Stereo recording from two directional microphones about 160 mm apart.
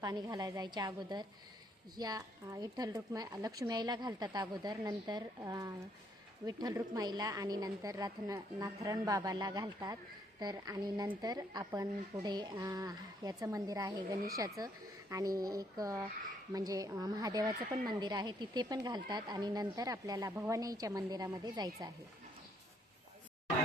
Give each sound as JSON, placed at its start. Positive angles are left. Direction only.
{"t": 0.0, "sound": "speech", "side_deg": -25}